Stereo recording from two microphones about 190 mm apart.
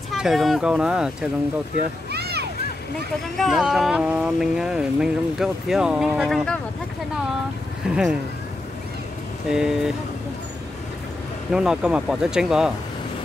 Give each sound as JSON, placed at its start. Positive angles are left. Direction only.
{"t": 0.1, "sound": "speech", "side_deg": 0}
{"t": 2.0, "sound": "a sound", "side_deg": -60}
{"t": 3.3, "sound": "speech", "side_deg": 0}
{"t": 7.9, "sound": "speech", "side_deg": -5}
{"t": 9.5, "sound": "speech", "side_deg": -5}
{"t": 11.5, "sound": "speech", "side_deg": -5}